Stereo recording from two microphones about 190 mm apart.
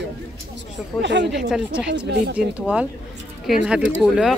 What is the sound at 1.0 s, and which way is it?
Speech, 65° right (ahead or behind).